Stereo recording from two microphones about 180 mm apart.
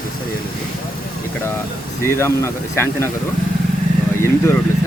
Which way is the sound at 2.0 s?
15° left (ahead or behind).